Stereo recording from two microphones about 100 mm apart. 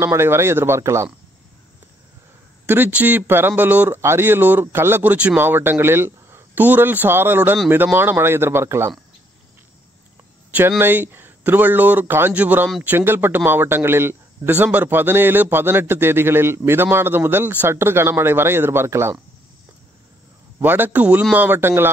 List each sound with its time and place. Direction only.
0.0 s a man's voice: 25° right (ahead or behind)
2.6 s a man's voice: 20° right (ahead or behind)
10.8 s a man's voice: 20° right (ahead or behind)
20.6 s a man's voice: 20° right (ahead or behind)